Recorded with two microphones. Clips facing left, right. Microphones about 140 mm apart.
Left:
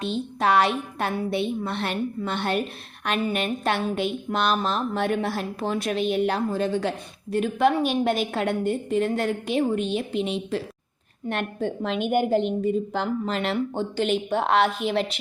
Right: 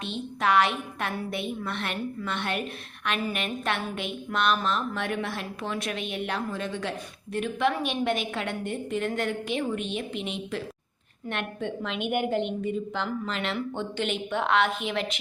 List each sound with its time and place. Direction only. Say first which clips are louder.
0.0 s a woman's voice: left 4 dB; 35° left (ahead or behind)